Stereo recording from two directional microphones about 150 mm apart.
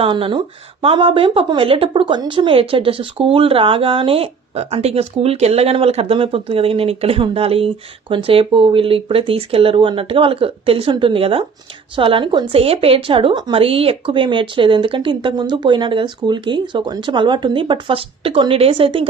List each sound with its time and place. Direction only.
0.0 s speech: 35° right (ahead or behind)